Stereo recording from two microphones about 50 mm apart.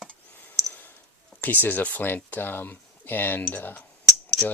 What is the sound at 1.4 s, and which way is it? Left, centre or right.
Speech, left.